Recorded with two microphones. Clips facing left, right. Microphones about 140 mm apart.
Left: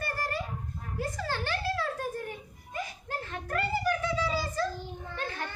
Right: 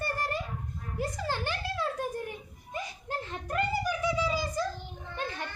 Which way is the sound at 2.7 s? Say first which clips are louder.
Even; 20° right (ahead or behind).